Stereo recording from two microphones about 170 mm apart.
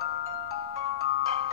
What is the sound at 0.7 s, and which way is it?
Marimba, 35° right (ahead or behind).